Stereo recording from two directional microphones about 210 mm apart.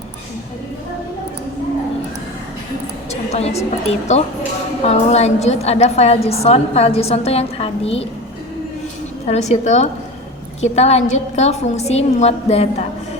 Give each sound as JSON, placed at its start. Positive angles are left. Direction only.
{"t": 3.1, "sound": "a woman's voice", "side_deg": 30}
{"t": 9.2, "sound": "a woman's voice", "side_deg": 30}